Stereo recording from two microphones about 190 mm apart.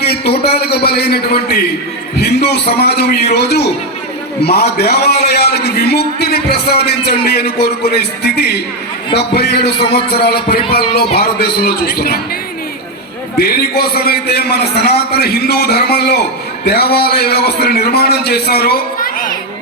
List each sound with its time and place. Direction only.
0.0 s a man's voice: 60° left (ahead or behind)
13.7 s a man's voice: 55° left (ahead or behind)